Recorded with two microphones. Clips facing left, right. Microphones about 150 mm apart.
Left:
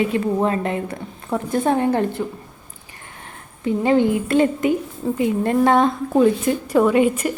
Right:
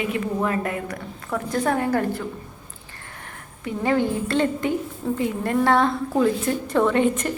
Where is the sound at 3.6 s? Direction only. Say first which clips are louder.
Left 5 dB; 20° left (ahead or behind).